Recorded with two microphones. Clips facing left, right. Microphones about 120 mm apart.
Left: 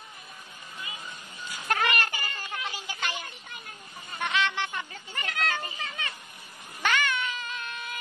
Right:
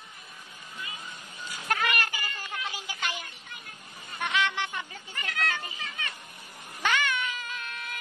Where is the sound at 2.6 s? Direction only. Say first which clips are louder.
Even; 5° right (ahead or behind).